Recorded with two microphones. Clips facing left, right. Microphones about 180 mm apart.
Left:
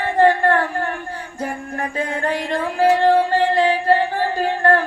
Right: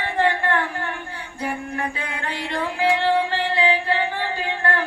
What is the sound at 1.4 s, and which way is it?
Music, 45° left (ahead or behind).